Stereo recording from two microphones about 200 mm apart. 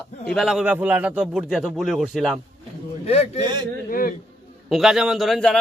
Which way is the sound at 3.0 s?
30° left (ahead or behind).